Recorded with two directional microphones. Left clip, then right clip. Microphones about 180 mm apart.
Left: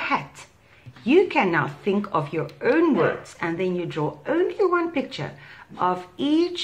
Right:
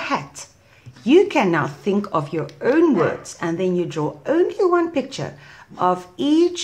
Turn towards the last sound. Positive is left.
turn(degrees=-45)  # may be behind; listen again after turning